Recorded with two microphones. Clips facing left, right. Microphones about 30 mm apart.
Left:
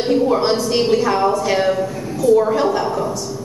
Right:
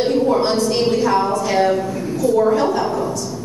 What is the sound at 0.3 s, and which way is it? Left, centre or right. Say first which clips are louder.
A woman's voice: even; centre.